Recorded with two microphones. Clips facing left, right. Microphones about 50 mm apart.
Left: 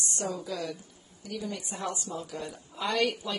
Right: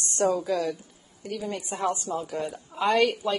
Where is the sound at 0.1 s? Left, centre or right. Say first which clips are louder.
Right 12 dB; right.